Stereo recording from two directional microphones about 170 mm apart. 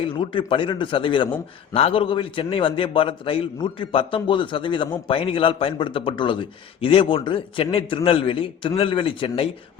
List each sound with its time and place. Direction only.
0.0 s a man's voice: 30° left (ahead or behind)